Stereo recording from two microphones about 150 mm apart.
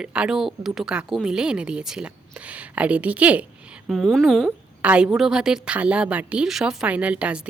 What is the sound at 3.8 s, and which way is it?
Speech, centre (ahead or behind).